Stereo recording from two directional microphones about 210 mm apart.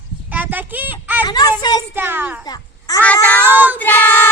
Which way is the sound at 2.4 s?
20° left (ahead or behind).